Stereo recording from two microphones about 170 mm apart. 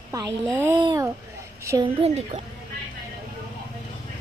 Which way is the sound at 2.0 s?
35° right (ahead or behind).